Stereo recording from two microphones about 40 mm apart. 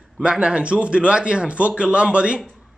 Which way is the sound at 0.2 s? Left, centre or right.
Right.